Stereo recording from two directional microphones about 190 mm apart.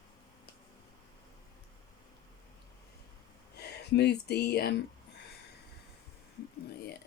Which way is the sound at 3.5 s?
60° left (ahead or behind).